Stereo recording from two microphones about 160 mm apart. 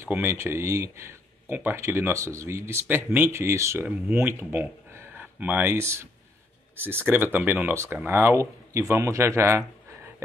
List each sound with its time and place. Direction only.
0.0 s speech: 15° right (ahead or behind)